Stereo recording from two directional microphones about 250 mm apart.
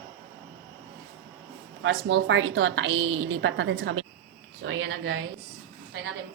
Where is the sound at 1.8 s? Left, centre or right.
Right.